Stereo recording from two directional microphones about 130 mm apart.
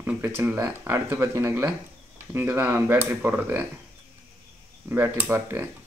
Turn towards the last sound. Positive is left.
turn(degrees=-15)  # may be behind; listen again after turning